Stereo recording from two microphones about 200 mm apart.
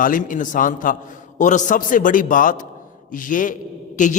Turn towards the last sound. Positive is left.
turn(degrees=40)  # may be behind; listen again after turning